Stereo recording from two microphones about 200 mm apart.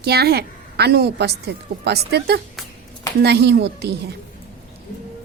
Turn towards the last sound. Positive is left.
turn(degrees=-55)  # may be behind; listen again after turning